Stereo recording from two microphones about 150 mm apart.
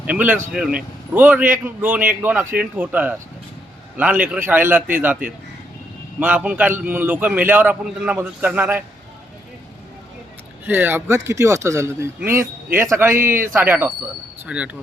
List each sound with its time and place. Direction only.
0.0 s a man's voice: 10° right (ahead or behind)
10.7 s a man's voice: 15° right (ahead or behind)